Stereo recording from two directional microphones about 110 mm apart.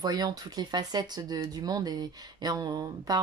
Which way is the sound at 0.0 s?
35° right (ahead or behind).